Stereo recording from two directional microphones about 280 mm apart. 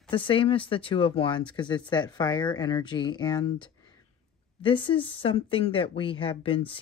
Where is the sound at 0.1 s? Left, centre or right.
Centre.